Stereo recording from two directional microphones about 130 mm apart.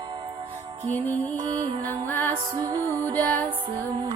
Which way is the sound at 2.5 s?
30° right (ahead or behind).